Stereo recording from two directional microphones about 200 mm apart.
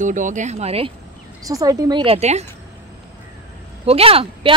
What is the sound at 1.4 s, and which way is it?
Speech, 20° right (ahead or behind).